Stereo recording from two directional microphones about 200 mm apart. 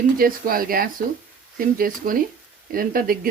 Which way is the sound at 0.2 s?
45° right (ahead or behind).